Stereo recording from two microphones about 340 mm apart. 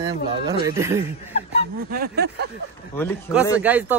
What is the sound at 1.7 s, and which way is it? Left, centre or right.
Speech, right.